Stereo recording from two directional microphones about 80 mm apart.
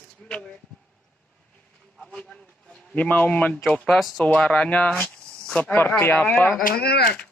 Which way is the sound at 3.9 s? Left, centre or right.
Centre.